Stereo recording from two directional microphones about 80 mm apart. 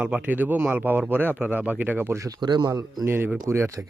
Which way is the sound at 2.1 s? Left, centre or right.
Right.